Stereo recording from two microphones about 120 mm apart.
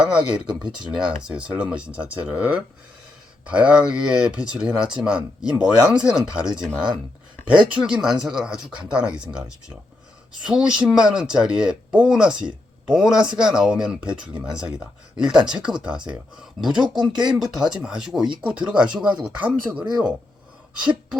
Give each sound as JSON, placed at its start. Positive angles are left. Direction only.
{"t": 0.0, "sound": "speech", "side_deg": -10}
{"t": 15.2, "sound": "speech", "side_deg": -5}